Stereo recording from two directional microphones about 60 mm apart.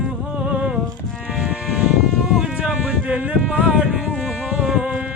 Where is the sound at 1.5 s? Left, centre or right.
Centre.